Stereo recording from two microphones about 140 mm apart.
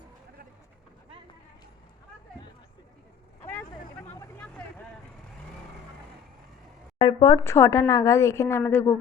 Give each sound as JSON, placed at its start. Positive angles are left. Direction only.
{"t": 3.4, "sound": "vehicle", "side_deg": 15}
{"t": 7.0, "sound": "a woman's voice", "side_deg": 25}